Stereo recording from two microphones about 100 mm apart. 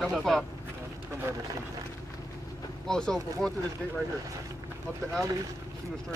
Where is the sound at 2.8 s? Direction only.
5° left (ahead or behind).